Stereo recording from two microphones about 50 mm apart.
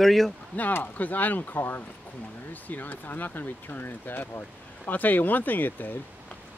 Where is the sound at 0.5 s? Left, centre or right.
Left.